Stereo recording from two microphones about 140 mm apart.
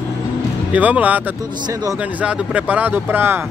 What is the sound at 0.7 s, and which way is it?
Speech, 10° right (ahead or behind).